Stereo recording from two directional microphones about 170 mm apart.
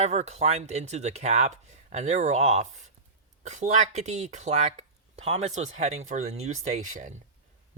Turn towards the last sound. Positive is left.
turn(degrees=-45)  # may be behind; listen again after turning